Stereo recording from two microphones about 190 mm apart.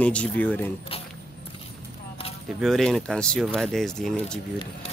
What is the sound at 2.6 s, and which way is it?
Speech, centre (ahead or behind).